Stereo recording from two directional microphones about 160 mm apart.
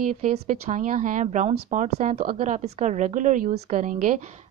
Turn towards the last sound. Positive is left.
turn(degrees=-55)  # may be behind; listen again after turning